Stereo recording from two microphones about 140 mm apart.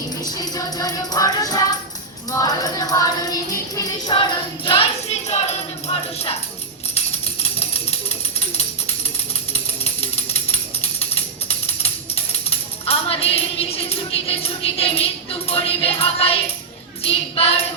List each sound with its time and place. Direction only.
0.3 s music: 25° left (ahead or behind)
5.3 s music: 50° left (ahead or behind)
9.5 s music: 45° left (ahead or behind)
17.0 s tambourine: 45° left (ahead or behind)